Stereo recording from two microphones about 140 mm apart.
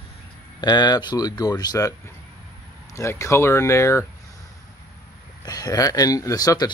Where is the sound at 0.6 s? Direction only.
30° left (ahead or behind).